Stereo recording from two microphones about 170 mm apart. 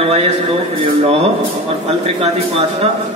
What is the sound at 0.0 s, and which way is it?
Speech, 35° right (ahead or behind).